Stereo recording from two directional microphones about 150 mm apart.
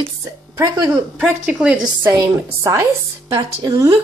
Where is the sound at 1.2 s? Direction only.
10° right (ahead or behind).